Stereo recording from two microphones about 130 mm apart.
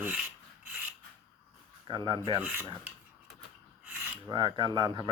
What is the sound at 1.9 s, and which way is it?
Speech, 35° right (ahead or behind).